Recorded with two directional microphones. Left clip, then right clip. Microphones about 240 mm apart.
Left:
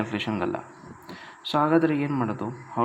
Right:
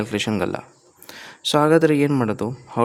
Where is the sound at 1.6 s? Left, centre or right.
Right.